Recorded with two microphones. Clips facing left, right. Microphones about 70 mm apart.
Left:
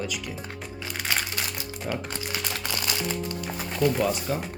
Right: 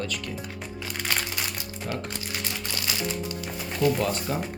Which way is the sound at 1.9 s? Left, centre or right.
Centre.